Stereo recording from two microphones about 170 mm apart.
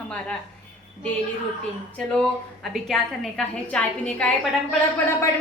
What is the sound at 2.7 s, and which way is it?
A woman's voice, centre (ahead or behind).